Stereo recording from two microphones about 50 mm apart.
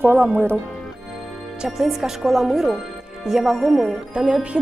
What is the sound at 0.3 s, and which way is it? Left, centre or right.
Speech, right.